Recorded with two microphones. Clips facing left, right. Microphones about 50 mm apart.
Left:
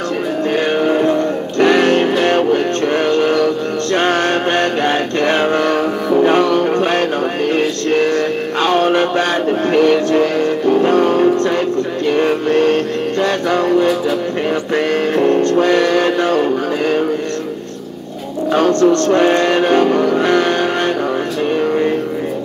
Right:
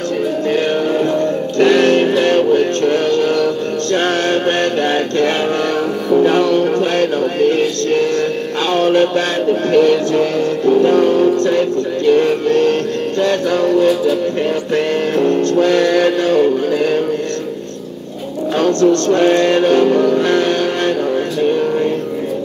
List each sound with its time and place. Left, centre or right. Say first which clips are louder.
0.8 s music: left 1 dB; left
10.9 s speech: even; left
12.1 s music: right 3 dB; left
18.6 s music: even; left